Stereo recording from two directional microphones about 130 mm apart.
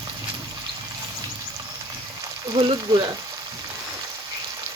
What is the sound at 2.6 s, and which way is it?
Speech, 40° right (ahead or behind).